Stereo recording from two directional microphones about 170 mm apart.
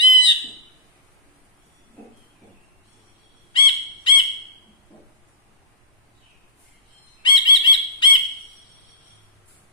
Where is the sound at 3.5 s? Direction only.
30° left (ahead or behind).